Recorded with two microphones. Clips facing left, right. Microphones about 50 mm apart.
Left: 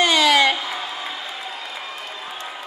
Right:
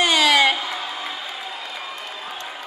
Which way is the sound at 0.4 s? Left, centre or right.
Centre.